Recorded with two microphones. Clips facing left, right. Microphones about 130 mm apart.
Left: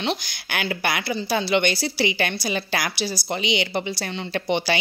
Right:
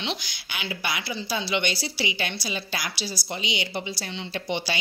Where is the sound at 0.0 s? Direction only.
50° left (ahead or behind).